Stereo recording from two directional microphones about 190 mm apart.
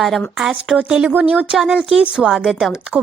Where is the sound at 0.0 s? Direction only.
Centre (ahead or behind).